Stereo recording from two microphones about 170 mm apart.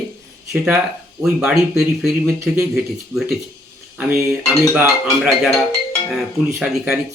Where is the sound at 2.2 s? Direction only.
15° right (ahead or behind).